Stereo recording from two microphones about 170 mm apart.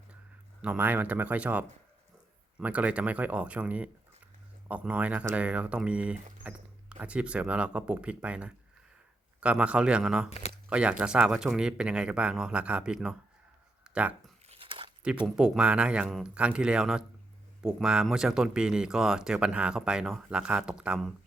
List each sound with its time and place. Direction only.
0.6 s speech: 10° right (ahead or behind)
10.2 s speech: 40° left (ahead or behind)
10.7 s speech: 5° right (ahead or behind)
14.5 s a sound: 30° right (ahead or behind)
15.4 s speech: 5° right (ahead or behind)